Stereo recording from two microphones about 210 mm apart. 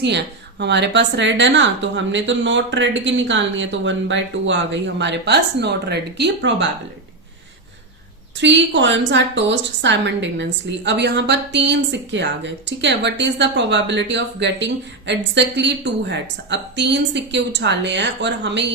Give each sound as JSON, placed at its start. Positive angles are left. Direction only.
{"t": 0.0, "sound": "a woman's voice", "side_deg": -55}
{"t": 8.4, "sound": "a woman's voice", "side_deg": -60}